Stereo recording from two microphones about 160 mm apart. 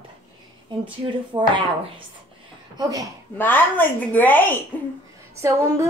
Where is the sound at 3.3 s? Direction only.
10° left (ahead or behind).